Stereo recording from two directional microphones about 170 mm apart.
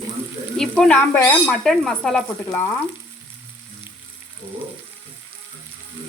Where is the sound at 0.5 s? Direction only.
5° left (ahead or behind).